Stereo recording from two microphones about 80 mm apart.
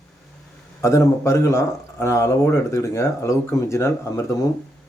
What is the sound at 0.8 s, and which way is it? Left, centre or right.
A man's voice, left.